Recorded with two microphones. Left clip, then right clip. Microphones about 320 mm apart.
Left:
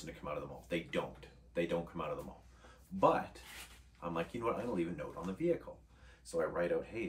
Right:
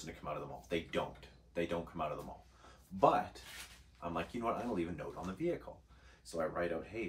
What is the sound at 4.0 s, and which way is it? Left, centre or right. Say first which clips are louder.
Speech: left 1 dB; centre.